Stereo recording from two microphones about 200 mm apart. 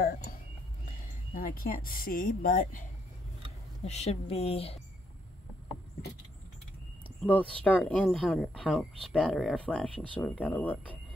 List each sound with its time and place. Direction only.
0.0 s speech: 45° left (ahead or behind)
3.8 s speech: 35° left (ahead or behind)
7.2 s speech: 5° left (ahead or behind)